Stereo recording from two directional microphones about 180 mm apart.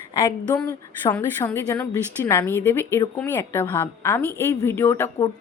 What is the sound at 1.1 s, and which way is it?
A woman's voice, 10° left (ahead or behind).